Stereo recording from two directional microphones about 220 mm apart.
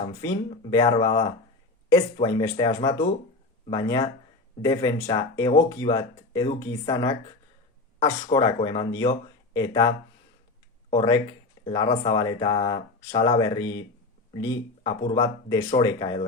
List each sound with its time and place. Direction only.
0.7 s speech: 20° left (ahead or behind)
10.9 s speech: 15° left (ahead or behind)